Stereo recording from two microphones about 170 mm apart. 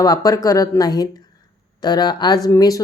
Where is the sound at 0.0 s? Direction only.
25° left (ahead or behind).